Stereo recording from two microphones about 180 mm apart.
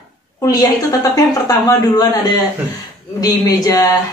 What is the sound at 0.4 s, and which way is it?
A woman's voice, 20° left (ahead or behind).